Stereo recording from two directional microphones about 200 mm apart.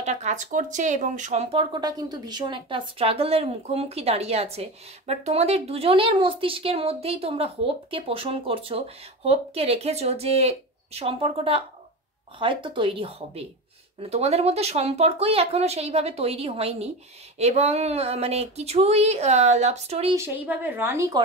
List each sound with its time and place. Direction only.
0.0 s speech: 35° right (ahead or behind)
20.2 s a woman's voice: 10° right (ahead or behind)